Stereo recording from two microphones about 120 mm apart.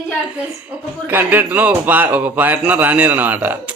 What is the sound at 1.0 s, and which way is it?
A man's voice, 15° right (ahead or behind).